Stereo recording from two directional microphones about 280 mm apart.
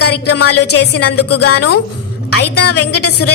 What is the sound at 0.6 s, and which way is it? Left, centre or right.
Speech, left.